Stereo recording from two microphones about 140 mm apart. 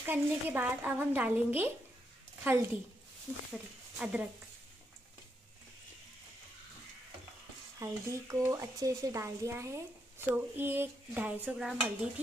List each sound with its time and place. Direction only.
0.0 s speech: 15° right (ahead or behind)
4.0 s speech: 10° right (ahead or behind)
7.8 s speech: 20° right (ahead or behind); by 12.1 s 5° right (ahead or behind)